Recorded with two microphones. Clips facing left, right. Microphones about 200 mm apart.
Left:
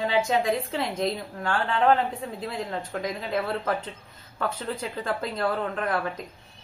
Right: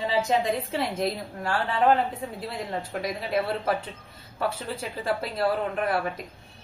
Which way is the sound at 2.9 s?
10° right (ahead or behind).